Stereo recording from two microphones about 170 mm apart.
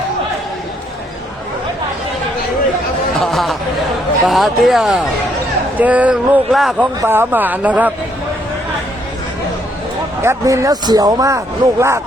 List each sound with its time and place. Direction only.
3.2 s chatter: centre (ahead or behind)
4.3 s speech: centre (ahead or behind)
7.0 s speech: 15° right (ahead or behind)
10.2 s speech: 15° right (ahead or behind)